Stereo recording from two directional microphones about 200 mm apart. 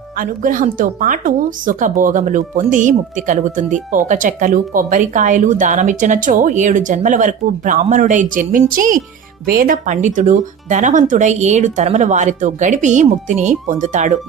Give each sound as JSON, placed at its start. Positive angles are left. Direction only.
{"t": 0.2, "sound": "speech", "side_deg": -40}